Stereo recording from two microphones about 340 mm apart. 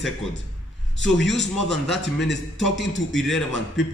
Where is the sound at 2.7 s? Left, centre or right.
Left.